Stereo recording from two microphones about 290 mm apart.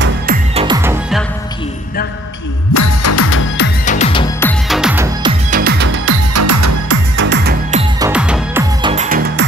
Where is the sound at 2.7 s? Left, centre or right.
Left.